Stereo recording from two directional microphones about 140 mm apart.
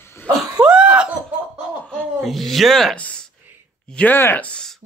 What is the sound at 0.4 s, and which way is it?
Cough, 5° right (ahead or behind).